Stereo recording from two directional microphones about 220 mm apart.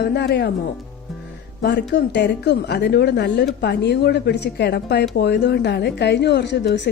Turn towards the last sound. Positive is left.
turn(degrees=50)  # may be behind; listen again after turning